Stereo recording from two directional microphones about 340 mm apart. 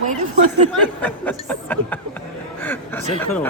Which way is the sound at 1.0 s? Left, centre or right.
Centre.